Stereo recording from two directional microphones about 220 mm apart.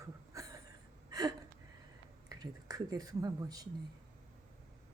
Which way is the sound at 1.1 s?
15° right (ahead or behind).